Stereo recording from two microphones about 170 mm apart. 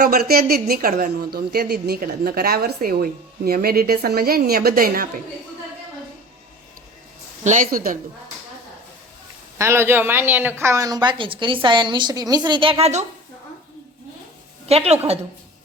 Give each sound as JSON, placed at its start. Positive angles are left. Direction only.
{"t": 0.0, "sound": "a woman's voice", "side_deg": -65}
{"t": 7.4, "sound": "speech", "side_deg": -50}
{"t": 9.6, "sound": "a woman's voice", "side_deg": -15}
{"t": 14.7, "sound": "a woman's voice", "side_deg": -35}